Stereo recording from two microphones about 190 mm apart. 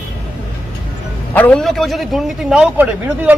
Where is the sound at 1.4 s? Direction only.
5° left (ahead or behind).